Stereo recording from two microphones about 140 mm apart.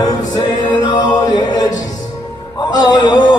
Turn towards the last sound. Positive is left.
turn(degrees=30)  # may be behind; listen again after turning